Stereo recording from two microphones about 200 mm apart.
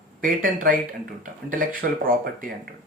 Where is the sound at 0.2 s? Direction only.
40° right (ahead or behind).